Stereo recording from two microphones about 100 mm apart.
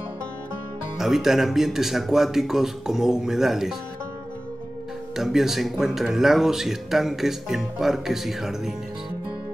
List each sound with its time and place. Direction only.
0.9 s speech: 5° right (ahead or behind)
5.1 s speech: 5° right (ahead or behind)